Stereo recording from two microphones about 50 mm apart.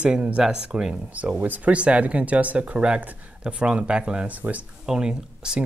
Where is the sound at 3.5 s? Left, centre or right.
Right.